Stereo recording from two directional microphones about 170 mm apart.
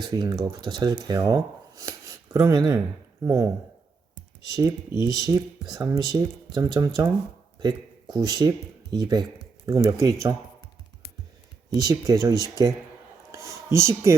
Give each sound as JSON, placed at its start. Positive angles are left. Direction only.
{"t": 0.0, "sound": "speech", "side_deg": -25}
{"t": 4.5, "sound": "speech", "side_deg": -20}
{"t": 8.1, "sound": "speech", "side_deg": -25}
{"t": 11.7, "sound": "speech", "side_deg": -20}
{"t": 13.3, "sound": "a sound", "side_deg": -15}